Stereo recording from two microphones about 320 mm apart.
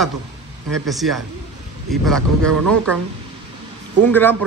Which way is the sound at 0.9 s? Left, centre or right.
Centre.